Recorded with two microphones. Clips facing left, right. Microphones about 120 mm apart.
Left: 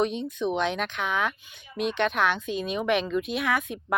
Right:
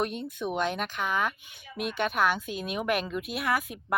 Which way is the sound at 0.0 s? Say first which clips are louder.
Left 5 dB; 5° right (ahead or behind).